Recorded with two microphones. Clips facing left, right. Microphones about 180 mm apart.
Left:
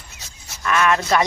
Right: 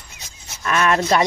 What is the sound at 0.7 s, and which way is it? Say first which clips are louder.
Speech: right 1 dB; 30° right (ahead or behind).